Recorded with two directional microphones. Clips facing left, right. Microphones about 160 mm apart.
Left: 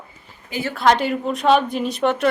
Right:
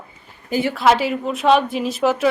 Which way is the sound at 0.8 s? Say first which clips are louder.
Left 1 dB; 5° right (ahead or behind).